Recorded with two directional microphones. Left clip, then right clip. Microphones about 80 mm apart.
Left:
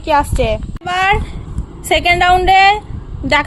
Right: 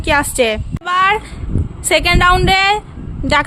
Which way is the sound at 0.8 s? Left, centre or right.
Right.